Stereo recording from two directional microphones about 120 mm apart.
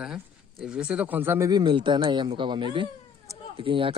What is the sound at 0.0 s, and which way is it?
Speech, 5° right (ahead or behind).